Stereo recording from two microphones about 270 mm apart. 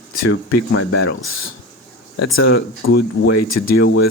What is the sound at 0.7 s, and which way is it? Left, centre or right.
Speech, left.